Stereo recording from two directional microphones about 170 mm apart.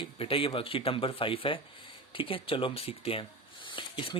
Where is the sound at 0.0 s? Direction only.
30° left (ahead or behind).